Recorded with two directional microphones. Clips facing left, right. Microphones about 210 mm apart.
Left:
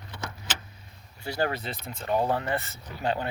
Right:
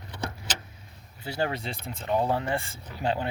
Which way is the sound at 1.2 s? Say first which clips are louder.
Left 1 dB; 20° right (ahead or behind).